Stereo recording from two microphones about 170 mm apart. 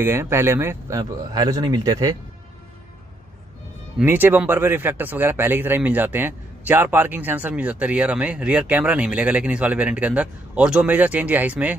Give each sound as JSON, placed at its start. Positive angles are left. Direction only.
{"t": 0.0, "sound": "speech", "side_deg": -15}
{"t": 4.0, "sound": "speech", "side_deg": -10}